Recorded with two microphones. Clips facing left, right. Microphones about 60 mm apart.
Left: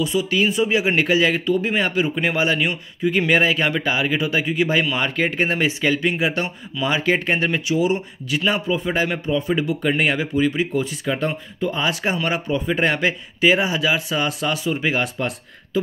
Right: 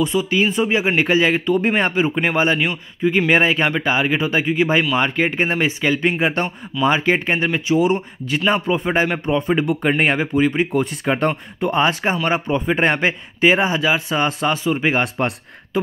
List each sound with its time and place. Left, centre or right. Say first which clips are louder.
0.0 s a man's voice: right 2 dB; right
5.9 s a man's voice: right 2 dB; right
6.8 s a man's voice: right 3 dB; right
7.8 s a man's voice: right 2 dB; right
10.8 s speech: right 4 dB; right
12.0 s a man's voice: right 3 dB; right